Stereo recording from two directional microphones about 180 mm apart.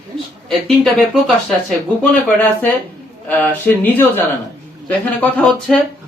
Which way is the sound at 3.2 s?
10° left (ahead or behind).